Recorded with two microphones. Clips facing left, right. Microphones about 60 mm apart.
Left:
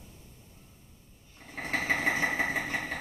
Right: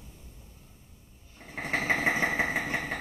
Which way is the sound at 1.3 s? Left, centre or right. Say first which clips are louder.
Right 2 dB; centre.